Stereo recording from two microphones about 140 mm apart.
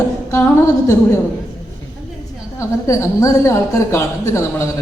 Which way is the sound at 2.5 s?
20° left (ahead or behind).